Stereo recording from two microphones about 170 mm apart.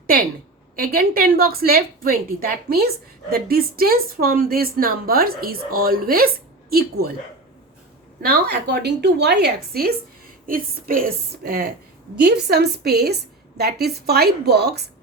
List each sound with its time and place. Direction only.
0.8 s a woman's voice: 60° right (ahead or behind)
8.2 s a woman's voice: 65° right (ahead or behind)
10.4 s a woman's voice: 55° right (ahead or behind)
12.1 s a woman's voice: 75° right (ahead or behind)